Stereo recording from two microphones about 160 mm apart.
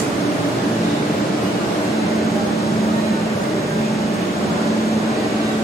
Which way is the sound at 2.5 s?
20° left (ahead or behind).